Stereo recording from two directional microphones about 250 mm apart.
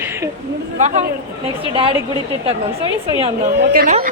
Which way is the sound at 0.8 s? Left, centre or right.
Right.